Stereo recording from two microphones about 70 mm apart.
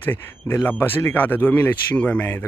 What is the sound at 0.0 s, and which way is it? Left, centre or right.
Speech, left.